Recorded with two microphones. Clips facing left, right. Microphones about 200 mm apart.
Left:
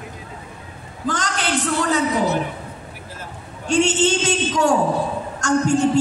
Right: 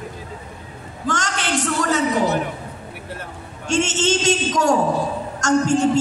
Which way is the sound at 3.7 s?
45° right (ahead or behind).